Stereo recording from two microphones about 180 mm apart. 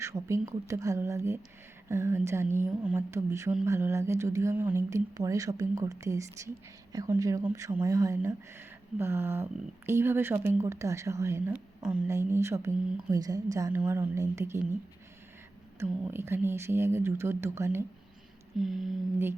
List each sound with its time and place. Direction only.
0.0 s speech: 15° right (ahead or behind)
15.8 s speech: 15° right (ahead or behind)
18.6 s mantra: centre (ahead or behind)